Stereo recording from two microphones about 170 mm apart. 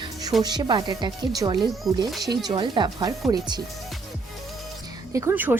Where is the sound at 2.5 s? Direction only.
25° right (ahead or behind).